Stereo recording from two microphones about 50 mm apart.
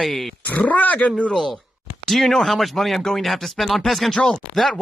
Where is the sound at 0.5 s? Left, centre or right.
Left.